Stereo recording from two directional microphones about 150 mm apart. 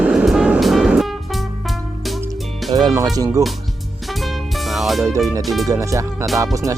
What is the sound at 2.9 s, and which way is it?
Speech, 25° right (ahead or behind).